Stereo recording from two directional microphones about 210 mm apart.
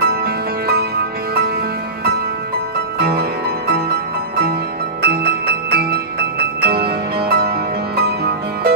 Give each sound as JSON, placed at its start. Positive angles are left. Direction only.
{"t": 0.0, "sound": "music", "side_deg": -50}
{"t": 3.0, "sound": "music", "side_deg": -50}